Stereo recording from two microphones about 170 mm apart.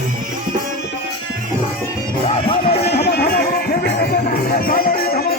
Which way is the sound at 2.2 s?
35° left (ahead or behind).